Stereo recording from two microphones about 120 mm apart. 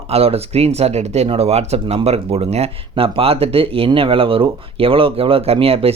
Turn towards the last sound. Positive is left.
turn(degrees=-55)  # may be behind; listen again after turning